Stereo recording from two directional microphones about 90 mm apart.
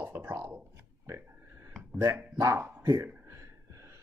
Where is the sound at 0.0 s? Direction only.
20° right (ahead or behind).